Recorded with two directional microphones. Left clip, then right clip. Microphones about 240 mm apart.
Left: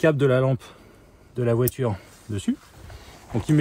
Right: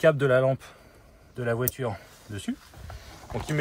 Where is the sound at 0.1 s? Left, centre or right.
Left.